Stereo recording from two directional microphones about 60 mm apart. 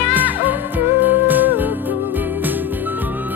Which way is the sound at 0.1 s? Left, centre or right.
Right.